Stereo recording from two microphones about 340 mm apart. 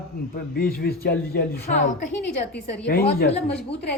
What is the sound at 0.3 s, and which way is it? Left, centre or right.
A woman's voice, left.